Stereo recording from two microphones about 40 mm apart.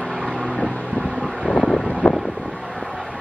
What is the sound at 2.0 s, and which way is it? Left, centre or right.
Wind, left.